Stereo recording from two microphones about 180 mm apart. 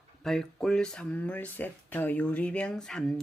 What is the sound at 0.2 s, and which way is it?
Speech, 5° left (ahead or behind).